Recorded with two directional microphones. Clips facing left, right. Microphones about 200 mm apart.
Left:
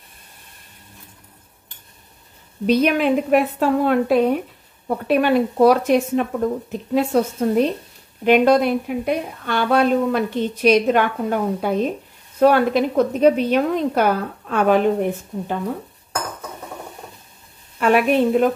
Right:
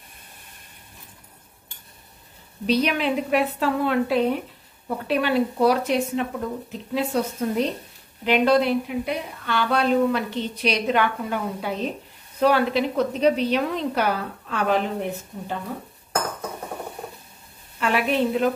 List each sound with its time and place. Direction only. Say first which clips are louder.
2.6 s a woman's voice: left 5 dB; 50° left (ahead or behind)
17.7 s a woman's voice: left 6 dB; 55° left (ahead or behind)